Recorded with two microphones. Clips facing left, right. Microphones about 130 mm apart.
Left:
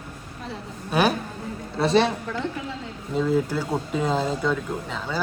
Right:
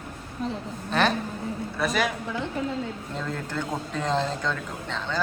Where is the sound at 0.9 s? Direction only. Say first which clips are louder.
Left 2 dB; 10° left (ahead or behind).